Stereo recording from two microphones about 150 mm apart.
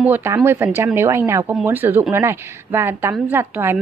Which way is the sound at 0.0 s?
15° right (ahead or behind).